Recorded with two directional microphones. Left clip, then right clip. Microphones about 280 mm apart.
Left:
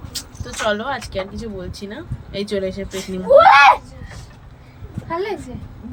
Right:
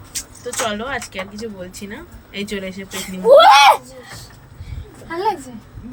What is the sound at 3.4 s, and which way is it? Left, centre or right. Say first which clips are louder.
Speech: left 1 dB; right.